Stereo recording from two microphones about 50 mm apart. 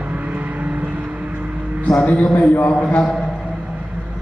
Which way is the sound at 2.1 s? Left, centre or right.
Left.